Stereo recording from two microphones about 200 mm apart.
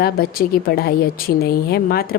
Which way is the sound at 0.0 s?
50° left (ahead or behind).